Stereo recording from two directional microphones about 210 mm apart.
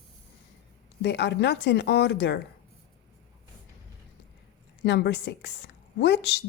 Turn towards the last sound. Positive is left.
turn(degrees=55)  # may be behind; listen again after turning